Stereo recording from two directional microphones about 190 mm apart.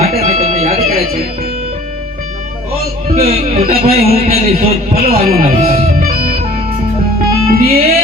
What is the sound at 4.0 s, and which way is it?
A man's voice, 35° right (ahead or behind).